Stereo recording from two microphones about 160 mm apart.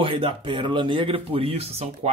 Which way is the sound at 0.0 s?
35° right (ahead or behind).